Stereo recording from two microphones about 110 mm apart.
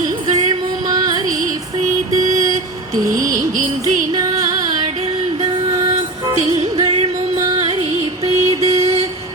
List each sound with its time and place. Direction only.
0.9 s music: 35° right (ahead or behind)
2.9 s music: 30° right (ahead or behind)
6.3 s music: 75° right (ahead or behind); by 8.7 s 55° right (ahead or behind)